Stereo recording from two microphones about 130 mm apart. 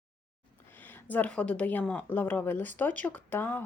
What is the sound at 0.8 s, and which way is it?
A woman's voice, 15° left (ahead or behind).